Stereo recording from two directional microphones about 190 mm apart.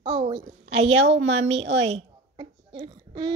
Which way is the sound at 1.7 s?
35° right (ahead or behind).